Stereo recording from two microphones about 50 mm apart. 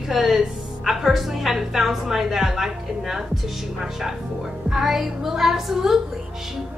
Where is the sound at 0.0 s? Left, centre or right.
Centre.